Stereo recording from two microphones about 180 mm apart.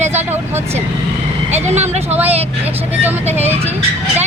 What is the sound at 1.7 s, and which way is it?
Speech, 40° right (ahead or behind).